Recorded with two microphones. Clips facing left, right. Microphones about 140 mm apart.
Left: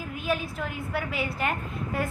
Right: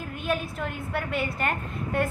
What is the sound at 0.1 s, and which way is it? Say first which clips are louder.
A woman's voice: even; centre (ahead or behind).